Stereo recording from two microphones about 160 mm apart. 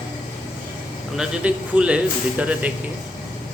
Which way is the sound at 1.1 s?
5° right (ahead or behind).